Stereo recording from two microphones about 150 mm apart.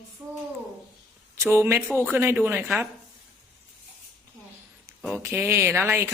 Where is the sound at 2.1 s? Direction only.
15° right (ahead or behind).